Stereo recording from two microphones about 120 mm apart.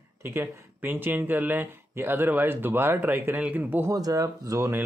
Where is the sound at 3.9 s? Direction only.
30° right (ahead or behind).